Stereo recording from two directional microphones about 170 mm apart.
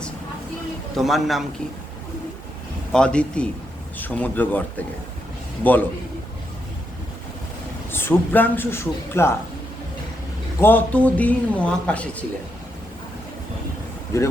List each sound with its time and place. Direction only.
0.9 s a man's voice: centre (ahead or behind)
2.9 s a man's voice: 5° left (ahead or behind)
7.9 s speech: 15° left (ahead or behind)
10.6 s speech: 10° left (ahead or behind)
14.1 s speech: 20° left (ahead or behind)